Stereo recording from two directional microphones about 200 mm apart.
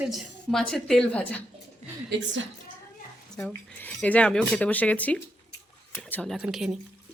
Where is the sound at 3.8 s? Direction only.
5° left (ahead or behind).